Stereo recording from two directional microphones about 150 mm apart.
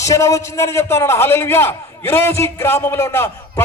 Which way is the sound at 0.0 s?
20° left (ahead or behind).